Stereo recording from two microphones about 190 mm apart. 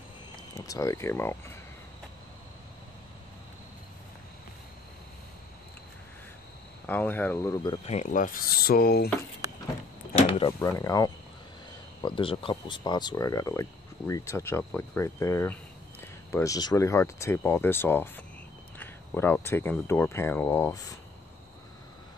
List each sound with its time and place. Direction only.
0.7 s speech: 15° left (ahead or behind)
6.9 s speech: 10° left (ahead or behind)
7.8 s speech: 40° left (ahead or behind); by 9.1 s 55° left (ahead or behind)
10.6 s speech: 15° left (ahead or behind)